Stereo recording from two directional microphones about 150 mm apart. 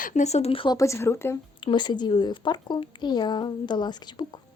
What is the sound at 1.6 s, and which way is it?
Speech, 30° left (ahead or behind).